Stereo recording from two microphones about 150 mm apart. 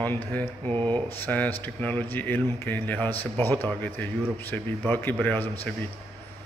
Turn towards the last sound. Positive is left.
turn(degrees=10)  # may be behind; listen again after turning